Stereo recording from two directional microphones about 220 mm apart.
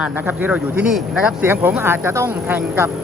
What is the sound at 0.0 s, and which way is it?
Speech, 10° right (ahead or behind).